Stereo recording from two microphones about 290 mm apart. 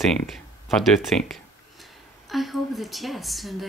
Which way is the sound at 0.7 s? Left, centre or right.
Centre.